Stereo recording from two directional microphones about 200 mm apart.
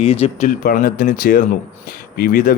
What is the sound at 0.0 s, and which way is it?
Speech, 30° left (ahead or behind).